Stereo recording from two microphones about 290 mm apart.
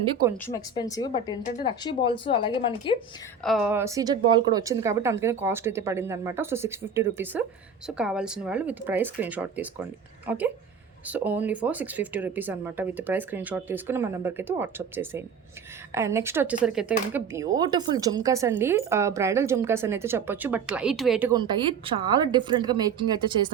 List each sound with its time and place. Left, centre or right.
0.0 s speech: centre
0.4 s speech: centre
3.4 s speech: centre